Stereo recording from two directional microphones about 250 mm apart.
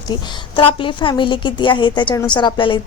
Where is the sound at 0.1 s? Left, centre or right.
Centre.